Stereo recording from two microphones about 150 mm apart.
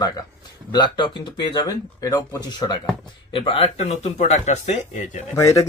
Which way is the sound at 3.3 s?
35° left (ahead or behind).